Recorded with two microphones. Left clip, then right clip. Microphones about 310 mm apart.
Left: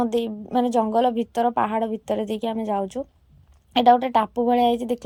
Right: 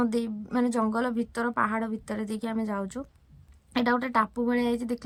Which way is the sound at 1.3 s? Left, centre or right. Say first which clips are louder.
Left 6 dB; centre.